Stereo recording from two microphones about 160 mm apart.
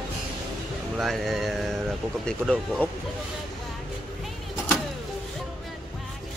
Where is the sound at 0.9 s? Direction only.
Centre (ahead or behind).